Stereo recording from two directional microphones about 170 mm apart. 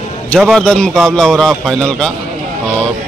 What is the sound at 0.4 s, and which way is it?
A man's voice, centre (ahead or behind).